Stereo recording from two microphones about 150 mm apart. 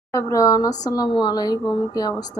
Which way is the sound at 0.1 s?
20° left (ahead or behind).